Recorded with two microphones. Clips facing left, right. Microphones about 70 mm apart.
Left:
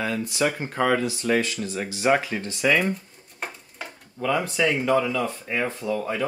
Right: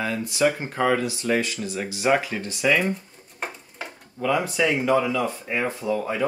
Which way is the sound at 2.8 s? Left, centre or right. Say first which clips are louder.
Even; centre.